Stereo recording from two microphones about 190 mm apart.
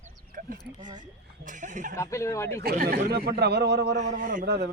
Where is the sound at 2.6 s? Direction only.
55° right (ahead or behind).